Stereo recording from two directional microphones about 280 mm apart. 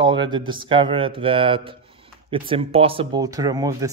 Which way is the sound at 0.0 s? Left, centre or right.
Centre.